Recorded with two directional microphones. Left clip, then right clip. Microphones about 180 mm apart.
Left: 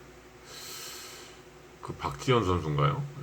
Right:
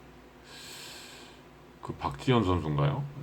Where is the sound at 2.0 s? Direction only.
15° right (ahead or behind).